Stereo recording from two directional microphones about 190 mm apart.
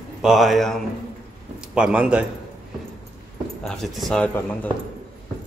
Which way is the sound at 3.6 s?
Centre (ahead or behind).